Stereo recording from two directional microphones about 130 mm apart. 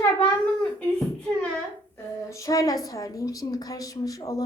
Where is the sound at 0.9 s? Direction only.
10° left (ahead or behind).